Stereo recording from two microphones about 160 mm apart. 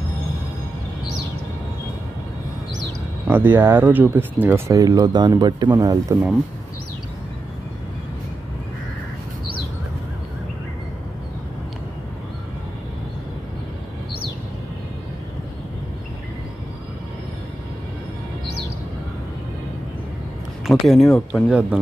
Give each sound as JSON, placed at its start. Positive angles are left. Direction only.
{"t": 3.3, "sound": "speech", "side_deg": -15}
{"t": 20.6, "sound": "speech", "side_deg": 0}
{"t": 21.5, "sound": "speech", "side_deg": -5}